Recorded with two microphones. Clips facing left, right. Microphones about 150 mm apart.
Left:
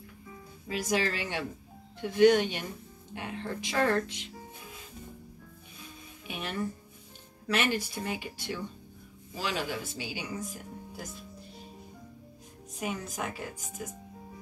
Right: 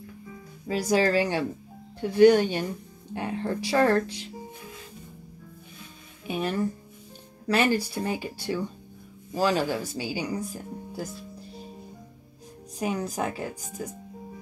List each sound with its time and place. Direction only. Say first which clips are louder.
0.7 s a woman's voice: right 7 dB; 35° right (ahead or behind)
6.2 s a woman's voice: right 7 dB; 40° right (ahead or behind)
12.7 s a woman's voice: right 7 dB; 35° right (ahead or behind)